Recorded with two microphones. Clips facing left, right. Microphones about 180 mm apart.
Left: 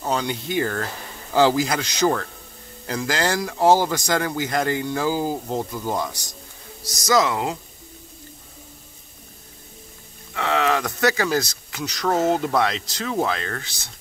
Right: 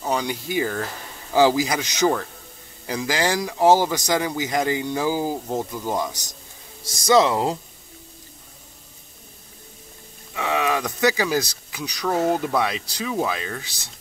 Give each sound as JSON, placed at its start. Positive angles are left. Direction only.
{"t": 0.1, "sound": "speech", "side_deg": -10}
{"t": 7.1, "sound": "speech", "side_deg": -30}
{"t": 10.3, "sound": "speech", "side_deg": -15}